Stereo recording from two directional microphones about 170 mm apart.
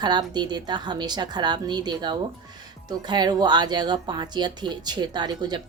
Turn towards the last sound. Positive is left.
turn(degrees=-25)  # may be behind; listen again after turning